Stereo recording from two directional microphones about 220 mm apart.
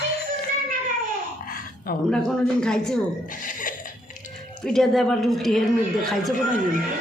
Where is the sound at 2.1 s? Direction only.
5° left (ahead or behind).